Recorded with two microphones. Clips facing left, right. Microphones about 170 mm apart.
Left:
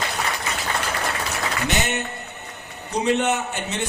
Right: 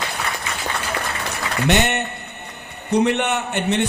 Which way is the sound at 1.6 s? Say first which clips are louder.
Right 8 dB; 65° right (ahead or behind).